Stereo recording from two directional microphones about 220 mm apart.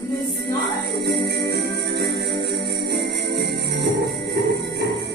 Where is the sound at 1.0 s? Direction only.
50° right (ahead or behind).